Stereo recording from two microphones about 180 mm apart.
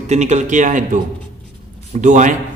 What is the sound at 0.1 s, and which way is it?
A man's voice, 40° right (ahead or behind).